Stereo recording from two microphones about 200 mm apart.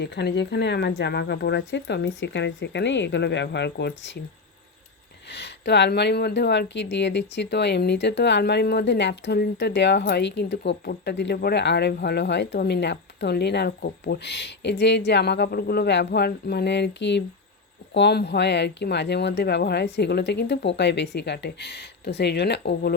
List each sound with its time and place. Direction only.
0.0 s speech: 55° left (ahead or behind)
5.3 s speech: 60° left (ahead or behind)